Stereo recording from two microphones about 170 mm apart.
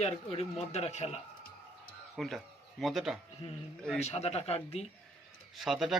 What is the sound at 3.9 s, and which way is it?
Speech, 40° left (ahead or behind).